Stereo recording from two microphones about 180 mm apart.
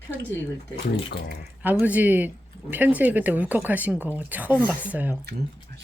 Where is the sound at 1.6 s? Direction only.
10° right (ahead or behind).